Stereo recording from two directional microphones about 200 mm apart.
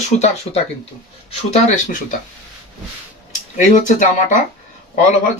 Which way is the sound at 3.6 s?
40° left (ahead or behind).